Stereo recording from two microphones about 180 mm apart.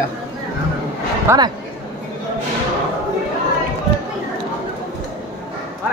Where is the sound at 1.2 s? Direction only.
20° right (ahead or behind).